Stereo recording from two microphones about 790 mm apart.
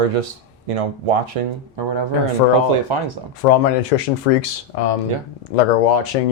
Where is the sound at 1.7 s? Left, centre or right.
Right.